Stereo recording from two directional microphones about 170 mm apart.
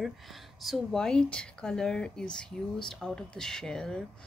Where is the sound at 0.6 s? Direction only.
Centre (ahead or behind).